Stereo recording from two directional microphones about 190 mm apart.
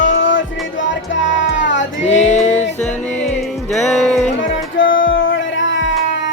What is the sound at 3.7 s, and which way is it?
Music, centre (ahead or behind).